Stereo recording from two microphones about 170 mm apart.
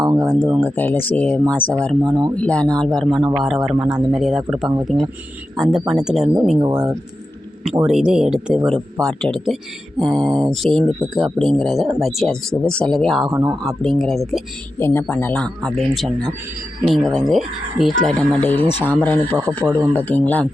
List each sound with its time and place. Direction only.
0.3 s speech: 15° right (ahead or behind)
0.6 s speech: 10° left (ahead or behind)
6.6 s speech: 25° right (ahead or behind)
7.8 s speech: 5° right (ahead or behind)
14.8 s speech: 15° left (ahead or behind)